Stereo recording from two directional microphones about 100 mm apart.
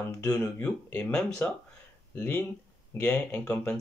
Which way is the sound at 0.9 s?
15° left (ahead or behind).